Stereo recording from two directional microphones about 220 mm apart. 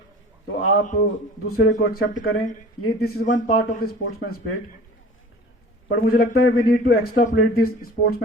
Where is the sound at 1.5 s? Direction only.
45° left (ahead or behind).